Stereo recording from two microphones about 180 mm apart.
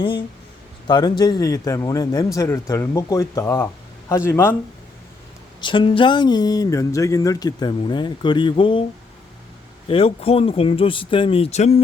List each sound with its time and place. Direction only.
0.0 s speech: 30° left (ahead or behind)
5.5 s speech: 25° left (ahead or behind)
9.9 s speech: 30° left (ahead or behind)